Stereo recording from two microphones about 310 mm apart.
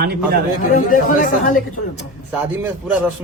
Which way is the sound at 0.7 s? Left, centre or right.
Left.